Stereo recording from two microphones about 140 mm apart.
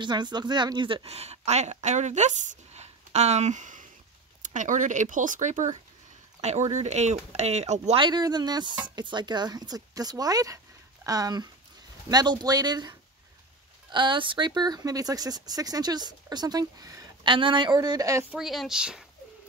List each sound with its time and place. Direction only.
0.0 s speech: 30° right (ahead or behind); by 8.0 s 55° right (ahead or behind)
8.0 s speech: 30° right (ahead or behind)
13.9 s speech: 35° right (ahead or behind)
18.3 s speech: centre (ahead or behind)